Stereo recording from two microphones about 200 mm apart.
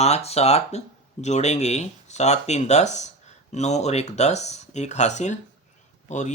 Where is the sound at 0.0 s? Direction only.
30° left (ahead or behind).